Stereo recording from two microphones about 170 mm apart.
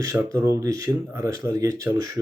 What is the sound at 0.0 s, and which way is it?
Speech, 20° right (ahead or behind).